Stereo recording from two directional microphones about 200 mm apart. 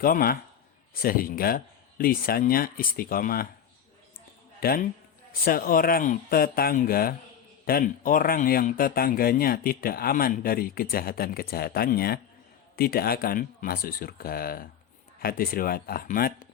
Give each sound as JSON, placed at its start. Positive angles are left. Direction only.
{"t": 0.0, "sound": "a man's voice", "side_deg": 45}
{"t": 4.6, "sound": "a man's voice", "side_deg": 45}